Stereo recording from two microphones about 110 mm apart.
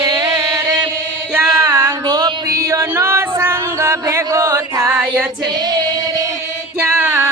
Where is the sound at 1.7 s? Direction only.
40° right (ahead or behind).